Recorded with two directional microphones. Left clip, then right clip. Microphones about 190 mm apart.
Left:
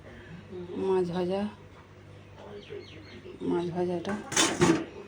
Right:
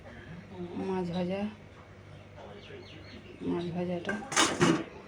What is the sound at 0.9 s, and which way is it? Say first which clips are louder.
Speech: left 6 dB; 15° left (ahead or behind).